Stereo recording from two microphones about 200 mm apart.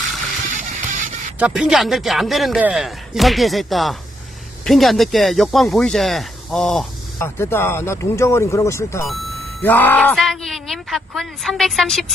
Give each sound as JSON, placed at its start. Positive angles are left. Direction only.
{"t": 0.5, "sound": "music", "side_deg": -40}
{"t": 1.4, "sound": "a man's voice", "side_deg": -5}